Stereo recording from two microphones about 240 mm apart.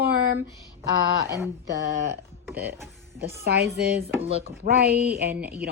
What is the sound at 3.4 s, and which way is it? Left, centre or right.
Speech, right.